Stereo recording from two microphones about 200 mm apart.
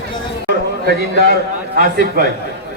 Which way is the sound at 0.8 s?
50° right (ahead or behind).